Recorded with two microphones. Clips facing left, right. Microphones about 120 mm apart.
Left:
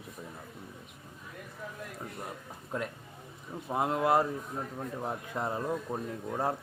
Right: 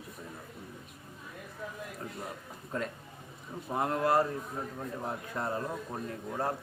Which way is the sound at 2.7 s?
10° left (ahead or behind).